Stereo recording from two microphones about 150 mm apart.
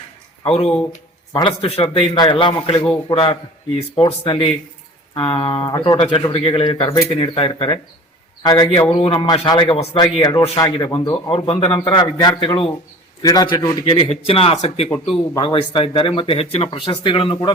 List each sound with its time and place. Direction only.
0.4 s a man's voice: 45° left (ahead or behind)